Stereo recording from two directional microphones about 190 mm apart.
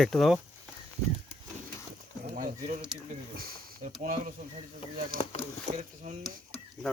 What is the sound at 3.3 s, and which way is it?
Speech, 50° right (ahead or behind).